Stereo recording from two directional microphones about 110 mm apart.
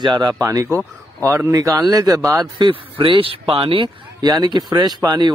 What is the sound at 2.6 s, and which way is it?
Speech, 50° right (ahead or behind).